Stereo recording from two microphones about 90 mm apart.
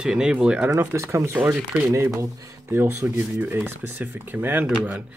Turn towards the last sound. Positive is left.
turn(degrees=-15)  # may be behind; listen again after turning